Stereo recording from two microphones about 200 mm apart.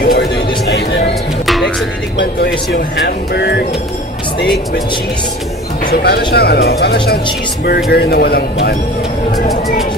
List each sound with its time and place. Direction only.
0.0 s a sound: 50° left (ahead or behind)
1.4 s music: centre (ahead or behind)
2.1 s speech: 55° left (ahead or behind)
5.9 s speech: 50° left (ahead or behind)